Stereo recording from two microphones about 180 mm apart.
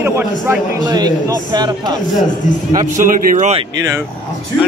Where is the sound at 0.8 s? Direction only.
20° right (ahead or behind).